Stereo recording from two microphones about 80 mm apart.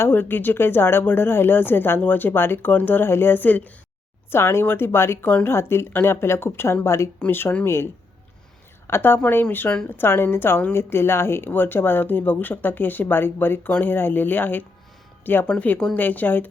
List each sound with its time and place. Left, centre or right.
0.0 s speech: left
8.9 s speech: left